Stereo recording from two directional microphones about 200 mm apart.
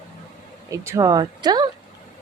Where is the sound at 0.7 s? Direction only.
15° right (ahead or behind).